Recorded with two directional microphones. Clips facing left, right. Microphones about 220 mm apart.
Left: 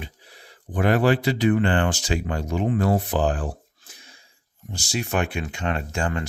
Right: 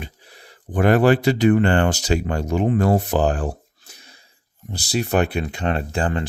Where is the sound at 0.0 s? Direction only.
45° right (ahead or behind).